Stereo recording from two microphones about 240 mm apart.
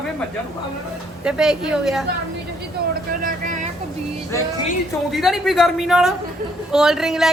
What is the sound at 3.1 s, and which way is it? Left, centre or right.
Vehicle, right.